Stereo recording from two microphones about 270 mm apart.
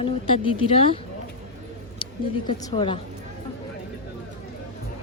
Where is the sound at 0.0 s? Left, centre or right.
Centre.